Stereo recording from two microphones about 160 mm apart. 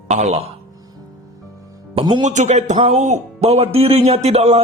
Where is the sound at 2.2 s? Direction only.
45° right (ahead or behind).